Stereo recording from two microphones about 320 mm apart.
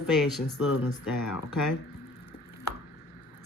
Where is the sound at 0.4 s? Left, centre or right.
Left.